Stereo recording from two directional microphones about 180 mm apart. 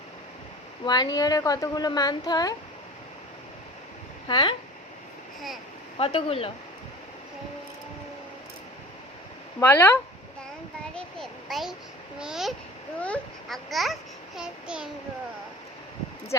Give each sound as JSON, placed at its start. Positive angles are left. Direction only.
{"t": 0.9, "sound": "speech", "side_deg": 20}
{"t": 4.3, "sound": "speech", "side_deg": 25}
{"t": 6.0, "sound": "speech", "side_deg": 30}
{"t": 9.6, "sound": "speech", "side_deg": 10}
{"t": 10.9, "sound": "a sound", "side_deg": 0}
{"t": 13.0, "sound": "babbling", "side_deg": 5}